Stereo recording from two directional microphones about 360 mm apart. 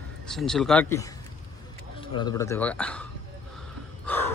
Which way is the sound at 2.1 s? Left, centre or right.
Centre.